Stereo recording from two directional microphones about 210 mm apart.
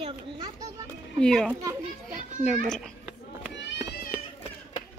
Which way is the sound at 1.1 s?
5° left (ahead or behind).